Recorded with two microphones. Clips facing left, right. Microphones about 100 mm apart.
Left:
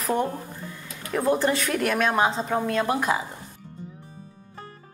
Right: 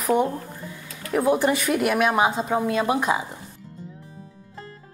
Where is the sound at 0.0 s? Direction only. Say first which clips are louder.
Right 4 dB; 10° right (ahead or behind).